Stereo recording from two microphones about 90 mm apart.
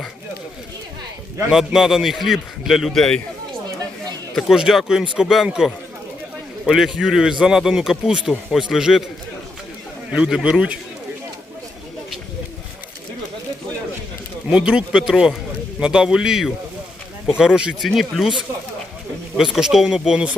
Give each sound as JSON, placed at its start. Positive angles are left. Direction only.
{"t": 1.5, "sound": "a man's voice", "side_deg": -5}
{"t": 4.4, "sound": "a man's voice", "side_deg": 0}
{"t": 6.7, "sound": "a man's voice", "side_deg": -5}
{"t": 10.1, "sound": "speech", "side_deg": -10}
{"t": 14.5, "sound": "a man's voice", "side_deg": -10}
{"t": 19.4, "sound": "speech", "side_deg": -5}